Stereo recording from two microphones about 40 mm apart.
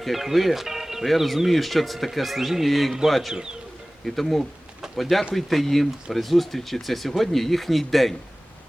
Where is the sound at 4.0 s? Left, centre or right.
Centre.